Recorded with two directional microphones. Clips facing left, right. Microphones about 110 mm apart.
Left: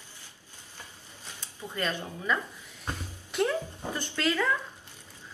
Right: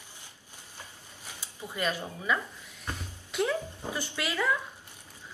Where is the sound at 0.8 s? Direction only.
15° right (ahead or behind).